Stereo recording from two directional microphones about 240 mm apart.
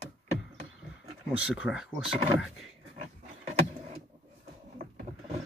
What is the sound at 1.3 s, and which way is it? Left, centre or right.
Speech, centre.